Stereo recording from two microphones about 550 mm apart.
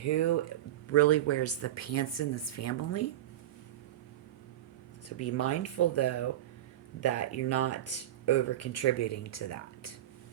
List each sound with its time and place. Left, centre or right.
0.0 s speech: left
5.0 s speech: left